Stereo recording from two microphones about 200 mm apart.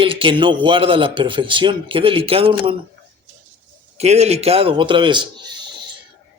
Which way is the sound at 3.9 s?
30° right (ahead or behind).